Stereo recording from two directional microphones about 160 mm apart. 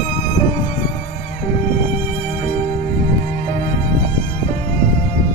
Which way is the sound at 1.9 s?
45° left (ahead or behind).